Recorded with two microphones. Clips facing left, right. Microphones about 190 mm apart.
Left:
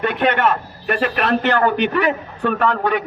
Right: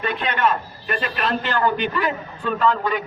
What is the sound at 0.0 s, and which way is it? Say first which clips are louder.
A man's voice: left 5 dB; 65° left (ahead or behind).